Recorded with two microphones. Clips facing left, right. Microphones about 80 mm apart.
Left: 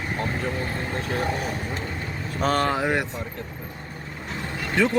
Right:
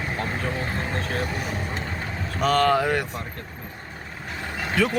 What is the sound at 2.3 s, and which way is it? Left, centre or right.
Speech, left.